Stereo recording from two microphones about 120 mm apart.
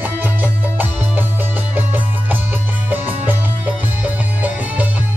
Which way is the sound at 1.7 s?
15° right (ahead or behind).